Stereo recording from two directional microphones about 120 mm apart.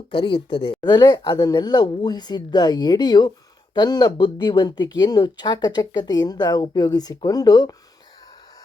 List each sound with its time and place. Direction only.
0.1 s speech: 45° left (ahead or behind)